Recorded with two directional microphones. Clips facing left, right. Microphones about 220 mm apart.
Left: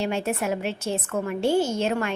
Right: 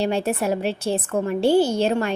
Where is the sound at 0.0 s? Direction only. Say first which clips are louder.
Right 4 dB; 35° right (ahead or behind).